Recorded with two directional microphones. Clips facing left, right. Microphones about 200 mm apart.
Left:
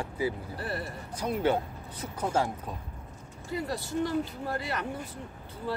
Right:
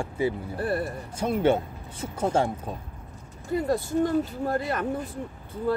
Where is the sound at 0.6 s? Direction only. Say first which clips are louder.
Right 8 dB; 50° right (ahead or behind).